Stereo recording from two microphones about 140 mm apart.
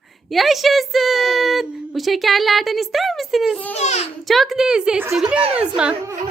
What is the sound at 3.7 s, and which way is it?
Speech, 50° left (ahead or behind).